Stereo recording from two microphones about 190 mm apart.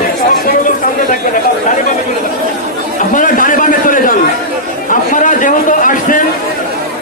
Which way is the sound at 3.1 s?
45° left (ahead or behind).